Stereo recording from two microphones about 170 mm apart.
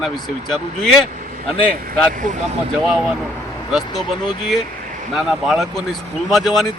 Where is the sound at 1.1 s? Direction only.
50° right (ahead or behind).